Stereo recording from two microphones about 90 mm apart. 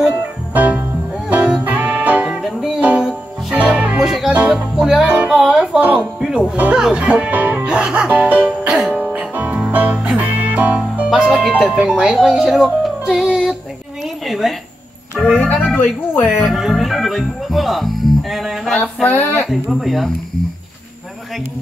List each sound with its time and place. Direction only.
0.6 s music: 20° right (ahead or behind); by 4.3 s 5° right (ahead or behind)
4.3 s music: 20° right (ahead or behind)
4.7 s music: 5° right (ahead or behind)
8.5 s music: 5° right (ahead or behind)
11.1 s speech: 5° right (ahead or behind)
14.2 s a sound: centre (ahead or behind)
15.3 s music: 20° left (ahead or behind)
15.7 s speech: 20° left (ahead or behind)
16.4 s music: centre (ahead or behind)
19.0 s speech: 20° left (ahead or behind)
19.5 s speech: centre (ahead or behind)